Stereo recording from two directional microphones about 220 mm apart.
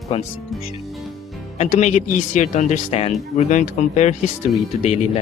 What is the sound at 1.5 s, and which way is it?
Speech, 30° left (ahead or behind).